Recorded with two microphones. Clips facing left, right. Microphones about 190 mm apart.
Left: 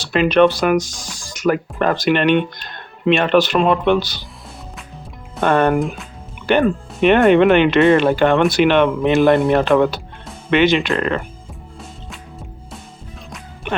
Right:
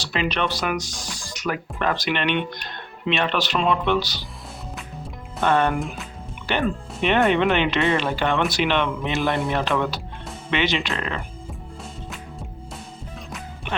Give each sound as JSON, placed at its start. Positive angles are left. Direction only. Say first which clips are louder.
{"t": 0.0, "sound": "speech", "louder": "left 11 dB", "side_deg": 50}
{"t": 5.4, "sound": "speech", "louder": "left 5 dB", "side_deg": 55}
{"t": 11.8, "sound": "music", "louder": "left 2 dB", "side_deg": 0}